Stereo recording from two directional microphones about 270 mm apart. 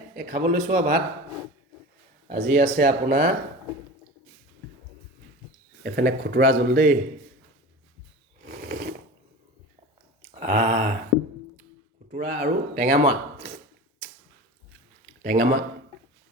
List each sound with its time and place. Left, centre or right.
0.2 s speech: right
2.2 s speech: right
5.8 s speech: right
8.4 s sewing machine: right
10.4 s speech: right
12.1 s a man's voice: right
15.2 s speech: right